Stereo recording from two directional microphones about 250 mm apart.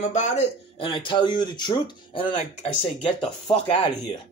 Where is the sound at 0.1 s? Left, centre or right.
Left.